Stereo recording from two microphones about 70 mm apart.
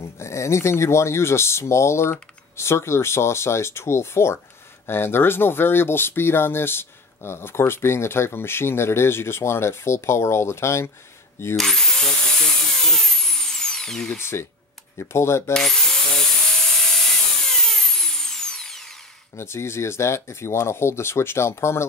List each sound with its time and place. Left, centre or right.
0.2 s speech: left
11.5 s tools: centre
14.1 s speech: left
15.5 s drill: centre
17.5 s a sound: centre
19.3 s speech: left